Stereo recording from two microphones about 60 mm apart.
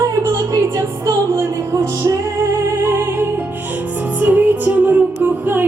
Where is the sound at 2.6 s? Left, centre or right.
Right.